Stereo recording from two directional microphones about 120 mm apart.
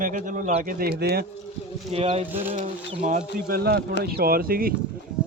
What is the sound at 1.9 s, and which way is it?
Speech, 55° right (ahead or behind).